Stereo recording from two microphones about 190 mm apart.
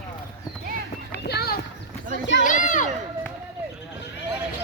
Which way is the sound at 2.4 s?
45° left (ahead or behind).